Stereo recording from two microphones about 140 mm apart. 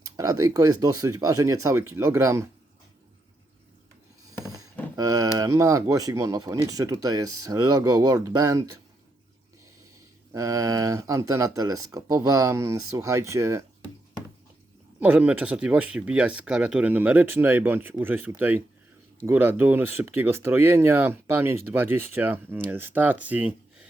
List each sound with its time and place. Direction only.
0.2 s speech: 25° right (ahead or behind)
4.4 s a sound: 25° right (ahead or behind)
5.4 s speech: 25° right (ahead or behind)
10.3 s speech: 25° right (ahead or behind)
15.0 s speech: 10° right (ahead or behind)